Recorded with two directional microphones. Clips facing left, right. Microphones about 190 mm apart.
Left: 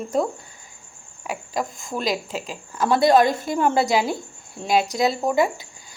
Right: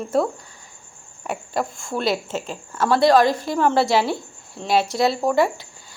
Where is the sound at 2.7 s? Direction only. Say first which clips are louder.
Right 1 dB; 15° left (ahead or behind).